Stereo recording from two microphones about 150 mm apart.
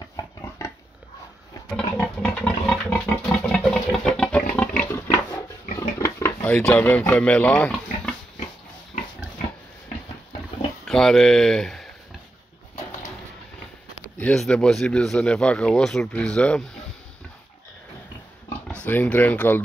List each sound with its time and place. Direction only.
0.1 s a sound: 20° left (ahead or behind)
2.0 s pig: 5° left (ahead or behind)
4.9 s a sound: 15° left (ahead or behind)
10.9 s speech: 5° left (ahead or behind)
14.1 s speech: 5° left (ahead or behind)
18.7 s speech: 10° left (ahead or behind)